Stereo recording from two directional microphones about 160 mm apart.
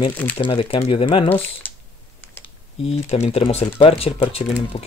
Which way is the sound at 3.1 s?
40° left (ahead or behind).